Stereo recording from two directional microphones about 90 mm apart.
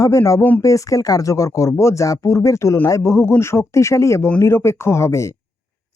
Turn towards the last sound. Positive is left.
turn(degrees=35)  # may be behind; listen again after turning